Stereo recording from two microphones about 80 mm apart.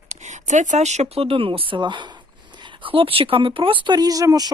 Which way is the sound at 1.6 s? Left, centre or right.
Right.